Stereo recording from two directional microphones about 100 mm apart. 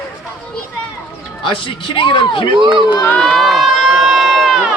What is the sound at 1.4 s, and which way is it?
Speech, 55° left (ahead or behind).